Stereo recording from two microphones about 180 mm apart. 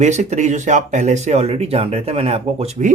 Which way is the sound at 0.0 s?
40° right (ahead or behind).